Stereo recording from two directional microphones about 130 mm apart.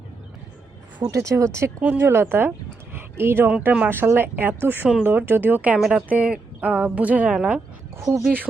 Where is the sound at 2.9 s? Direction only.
20° right (ahead or behind).